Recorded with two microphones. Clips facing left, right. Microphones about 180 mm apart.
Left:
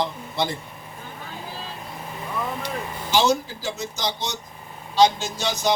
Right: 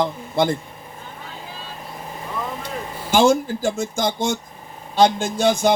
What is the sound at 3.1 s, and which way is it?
A man's voice, 50° right (ahead or behind).